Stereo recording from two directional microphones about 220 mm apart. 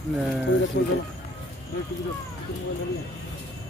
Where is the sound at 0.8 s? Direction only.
50° left (ahead or behind).